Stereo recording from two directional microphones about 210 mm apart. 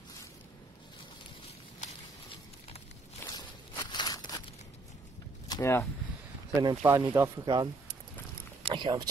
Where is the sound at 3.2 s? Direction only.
15° left (ahead or behind).